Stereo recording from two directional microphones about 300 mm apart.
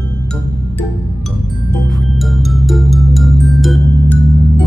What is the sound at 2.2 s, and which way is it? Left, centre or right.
Music, centre.